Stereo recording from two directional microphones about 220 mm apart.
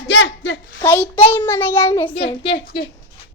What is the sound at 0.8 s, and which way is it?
A child's voice, 10° left (ahead or behind).